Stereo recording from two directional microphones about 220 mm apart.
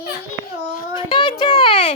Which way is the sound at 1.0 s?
25° left (ahead or behind).